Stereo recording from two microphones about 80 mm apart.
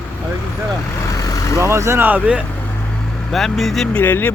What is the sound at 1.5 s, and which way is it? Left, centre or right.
Speech, right.